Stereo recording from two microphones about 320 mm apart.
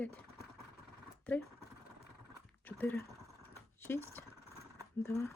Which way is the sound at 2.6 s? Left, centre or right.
Centre.